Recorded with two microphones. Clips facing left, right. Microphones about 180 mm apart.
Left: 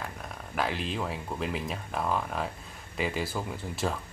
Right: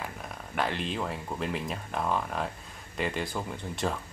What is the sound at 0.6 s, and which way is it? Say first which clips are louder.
Speech: even; centre (ahead or behind).